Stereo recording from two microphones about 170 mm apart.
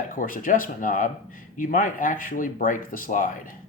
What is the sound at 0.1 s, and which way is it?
Speech, 55° left (ahead or behind).